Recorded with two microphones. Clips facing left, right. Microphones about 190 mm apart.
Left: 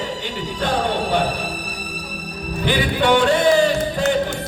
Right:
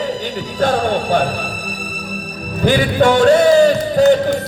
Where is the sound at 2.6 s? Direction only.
45° right (ahead or behind).